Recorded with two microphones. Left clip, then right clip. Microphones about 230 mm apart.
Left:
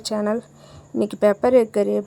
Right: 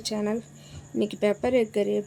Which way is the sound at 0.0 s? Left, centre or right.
Centre.